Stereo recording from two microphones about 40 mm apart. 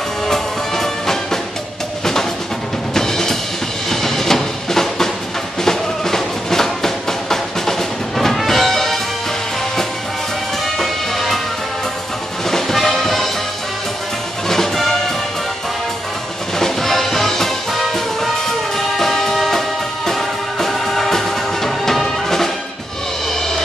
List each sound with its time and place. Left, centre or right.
0.3 s music: centre
2.9 s drum kit: centre
3.9 s music: centre
10.8 s music: centre
12.4 s music: centre
14.5 s music: centre
16.5 s music: centre